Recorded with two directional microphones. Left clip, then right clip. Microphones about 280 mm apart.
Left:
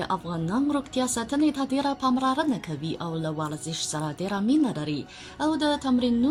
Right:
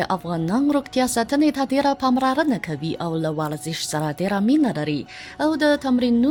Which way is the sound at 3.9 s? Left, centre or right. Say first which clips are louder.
Right 9 dB; right.